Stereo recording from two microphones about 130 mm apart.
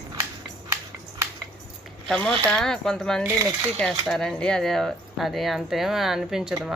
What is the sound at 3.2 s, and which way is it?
Speech, 20° right (ahead or behind).